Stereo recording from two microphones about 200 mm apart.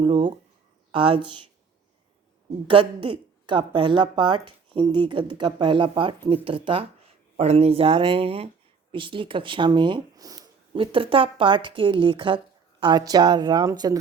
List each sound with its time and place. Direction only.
0.0 s a sound: 25° right (ahead or behind)
0.9 s speech: 25° right (ahead or behind)
2.6 s speech: 25° right (ahead or behind)